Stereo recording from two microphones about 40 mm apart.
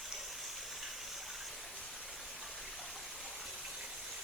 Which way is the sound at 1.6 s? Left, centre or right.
Centre.